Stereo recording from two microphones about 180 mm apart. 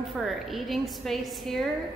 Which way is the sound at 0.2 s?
Centre (ahead or behind).